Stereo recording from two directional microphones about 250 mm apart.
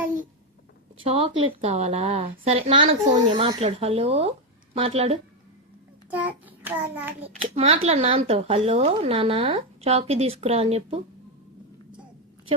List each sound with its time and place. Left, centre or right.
1.0 s a woman's voice: right
6.1 s a child's voice: centre
7.5 s speech: right